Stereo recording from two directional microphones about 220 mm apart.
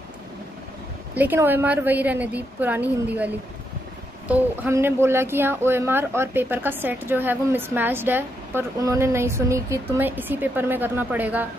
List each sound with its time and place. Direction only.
1.1 s speech: 10° right (ahead or behind)
4.3 s speech: 10° right (ahead or behind)